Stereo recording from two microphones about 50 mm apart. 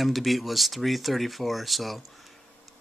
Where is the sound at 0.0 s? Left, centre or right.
Centre.